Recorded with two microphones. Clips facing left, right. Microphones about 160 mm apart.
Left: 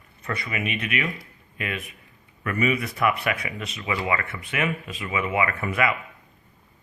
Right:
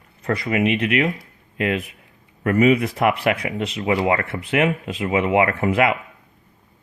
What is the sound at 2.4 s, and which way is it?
Speech, 75° right (ahead or behind).